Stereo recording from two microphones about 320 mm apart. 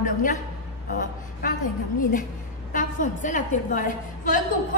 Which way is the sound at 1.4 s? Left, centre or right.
Left.